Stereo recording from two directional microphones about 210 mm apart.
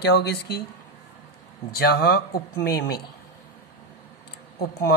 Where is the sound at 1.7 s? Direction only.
50° left (ahead or behind).